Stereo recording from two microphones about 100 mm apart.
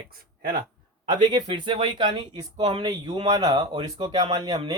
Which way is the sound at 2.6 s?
90° right.